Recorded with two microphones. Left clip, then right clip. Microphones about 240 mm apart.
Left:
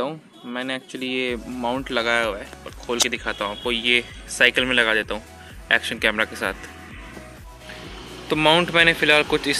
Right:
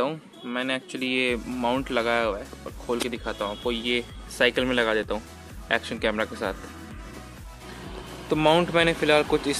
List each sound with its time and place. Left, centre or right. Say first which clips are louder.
0.0 s speech: even; centre
8.3 s speech: left 3 dB; centre